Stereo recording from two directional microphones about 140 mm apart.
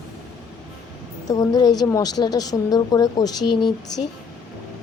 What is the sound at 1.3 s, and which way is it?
Speech, 25° left (ahead or behind).